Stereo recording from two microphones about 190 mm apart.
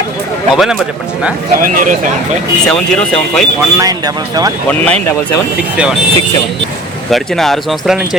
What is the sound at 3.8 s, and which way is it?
Speech, 20° right (ahead or behind).